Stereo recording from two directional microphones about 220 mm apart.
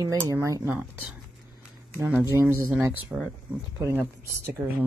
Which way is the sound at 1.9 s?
10° right (ahead or behind).